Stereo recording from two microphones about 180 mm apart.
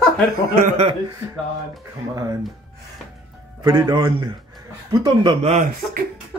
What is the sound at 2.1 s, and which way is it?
Speech, 15° right (ahead or behind).